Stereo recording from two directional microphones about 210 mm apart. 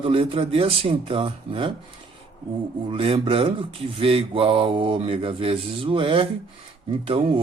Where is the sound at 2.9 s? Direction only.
25° right (ahead or behind).